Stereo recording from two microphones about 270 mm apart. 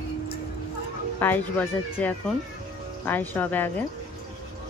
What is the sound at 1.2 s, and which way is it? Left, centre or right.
Speech, centre.